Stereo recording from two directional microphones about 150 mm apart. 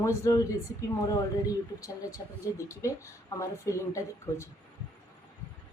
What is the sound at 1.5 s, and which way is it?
Speech, 25° left (ahead or behind).